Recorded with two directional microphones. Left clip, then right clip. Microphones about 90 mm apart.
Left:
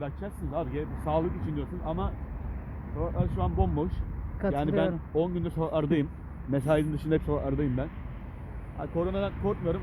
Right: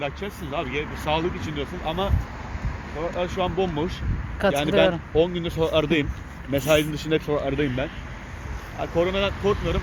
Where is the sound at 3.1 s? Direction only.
50° left (ahead or behind).